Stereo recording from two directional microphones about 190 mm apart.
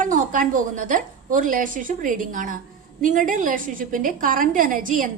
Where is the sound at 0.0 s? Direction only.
45° right (ahead or behind).